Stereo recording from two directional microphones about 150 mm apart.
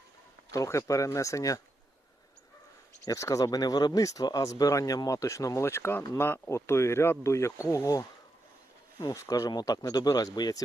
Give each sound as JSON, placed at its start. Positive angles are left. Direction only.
{"t": 0.5, "sound": "speech", "side_deg": 20}
{"t": 3.1, "sound": "speech", "side_deg": 20}